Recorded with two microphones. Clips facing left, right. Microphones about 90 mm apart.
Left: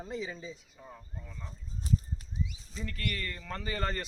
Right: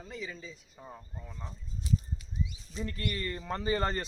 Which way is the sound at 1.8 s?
40° left (ahead or behind).